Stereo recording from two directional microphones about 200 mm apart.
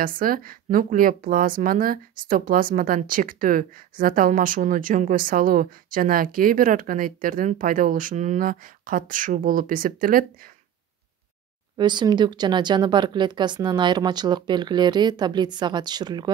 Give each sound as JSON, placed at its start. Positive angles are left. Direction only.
{"t": 0.0, "sound": "speech", "side_deg": -45}
{"t": 11.7, "sound": "speech", "side_deg": -20}